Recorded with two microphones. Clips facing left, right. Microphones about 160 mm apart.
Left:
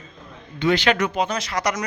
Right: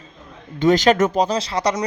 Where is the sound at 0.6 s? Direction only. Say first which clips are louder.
Right 5 dB; 40° right (ahead or behind).